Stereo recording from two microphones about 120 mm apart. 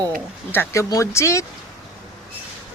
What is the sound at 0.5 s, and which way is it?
Speech, 20° left (ahead or behind).